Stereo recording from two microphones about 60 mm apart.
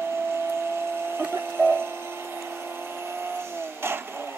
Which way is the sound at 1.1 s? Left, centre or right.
Right.